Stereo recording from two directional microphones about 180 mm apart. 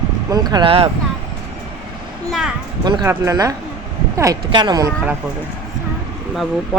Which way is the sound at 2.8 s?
25° right (ahead or behind).